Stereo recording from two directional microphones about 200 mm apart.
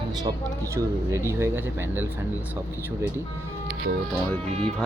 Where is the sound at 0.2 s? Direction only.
20° right (ahead or behind).